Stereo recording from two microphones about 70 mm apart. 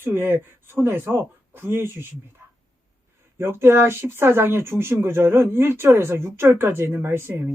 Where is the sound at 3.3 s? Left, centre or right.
Right.